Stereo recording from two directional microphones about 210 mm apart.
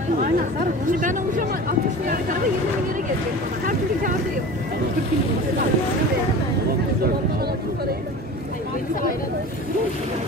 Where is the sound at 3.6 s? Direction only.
40° right (ahead or behind).